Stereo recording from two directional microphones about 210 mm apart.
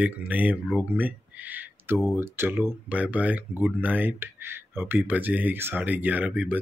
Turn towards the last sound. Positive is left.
turn(degrees=-5)  # may be behind; listen again after turning